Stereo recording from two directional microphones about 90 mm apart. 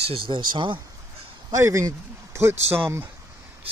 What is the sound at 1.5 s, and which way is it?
Speech, 35° right (ahead or behind).